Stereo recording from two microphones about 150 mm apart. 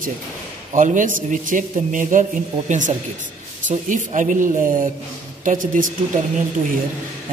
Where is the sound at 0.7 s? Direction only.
60° right (ahead or behind).